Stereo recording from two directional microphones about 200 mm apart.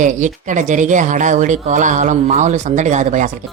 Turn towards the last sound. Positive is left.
turn(degrees=-35)  # may be behind; listen again after turning